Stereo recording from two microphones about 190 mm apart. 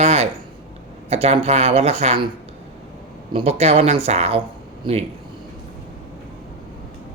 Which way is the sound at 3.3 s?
35° right (ahead or behind).